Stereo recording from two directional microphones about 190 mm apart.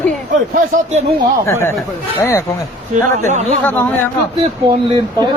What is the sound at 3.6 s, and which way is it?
Speech, 10° left (ahead or behind).